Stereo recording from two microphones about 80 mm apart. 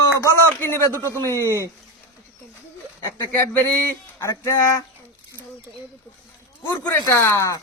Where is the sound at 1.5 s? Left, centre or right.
Right.